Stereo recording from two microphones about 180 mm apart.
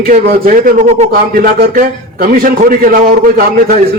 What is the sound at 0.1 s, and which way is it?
A man's voice, 50° right (ahead or behind).